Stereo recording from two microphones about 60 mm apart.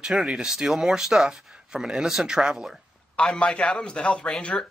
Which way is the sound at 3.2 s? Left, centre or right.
Centre.